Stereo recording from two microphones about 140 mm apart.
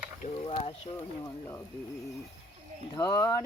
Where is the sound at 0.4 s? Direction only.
45° left (ahead or behind).